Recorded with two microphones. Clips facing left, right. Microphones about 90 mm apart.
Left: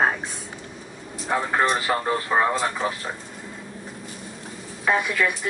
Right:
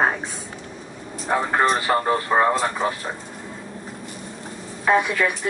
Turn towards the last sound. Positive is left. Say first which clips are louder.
# right 3 dB
turn(degrees=0)  # may be behind; listen again after turning